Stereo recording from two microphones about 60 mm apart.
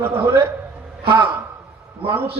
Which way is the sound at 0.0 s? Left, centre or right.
Right.